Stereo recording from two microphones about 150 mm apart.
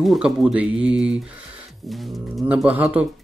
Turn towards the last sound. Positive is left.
turn(degrees=-10)  # may be behind; listen again after turning